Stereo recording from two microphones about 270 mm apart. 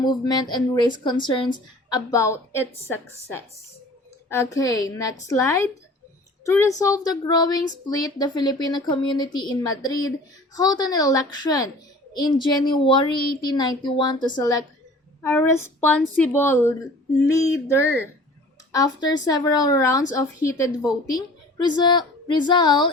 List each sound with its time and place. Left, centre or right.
0.5 s speech: centre